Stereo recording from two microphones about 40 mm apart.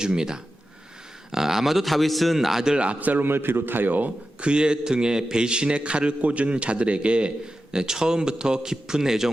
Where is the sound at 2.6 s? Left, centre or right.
Centre.